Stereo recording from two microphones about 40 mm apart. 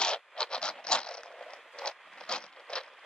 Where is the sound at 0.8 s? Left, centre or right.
Left.